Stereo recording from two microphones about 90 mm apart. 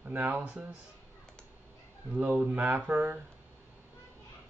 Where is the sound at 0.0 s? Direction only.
20° right (ahead or behind).